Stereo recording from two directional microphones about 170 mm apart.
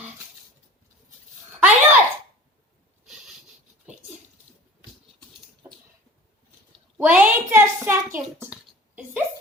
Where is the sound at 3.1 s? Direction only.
5° right (ahead or behind).